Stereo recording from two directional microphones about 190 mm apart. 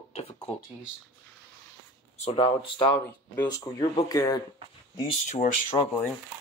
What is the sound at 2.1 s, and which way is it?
Speech, 35° left (ahead or behind).